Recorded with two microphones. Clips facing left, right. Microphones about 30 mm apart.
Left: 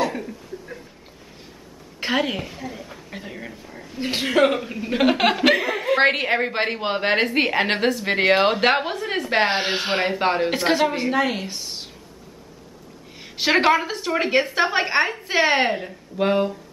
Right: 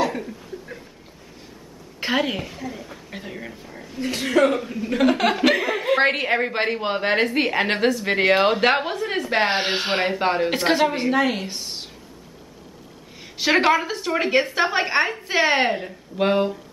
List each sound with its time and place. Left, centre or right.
0.0 s chuckle: centre
2.0 s a woman's voice: centre
4.0 s speech: left
4.3 s a woman's voice: centre
4.9 s speech: centre
5.4 s a woman's voice: centre
5.9 s a woman's voice: centre
10.1 s a woman's voice: centre
10.5 s a woman's voice: centre
13.2 s a woman's voice: centre